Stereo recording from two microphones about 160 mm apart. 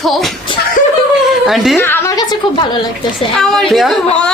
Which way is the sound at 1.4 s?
Centre (ahead or behind).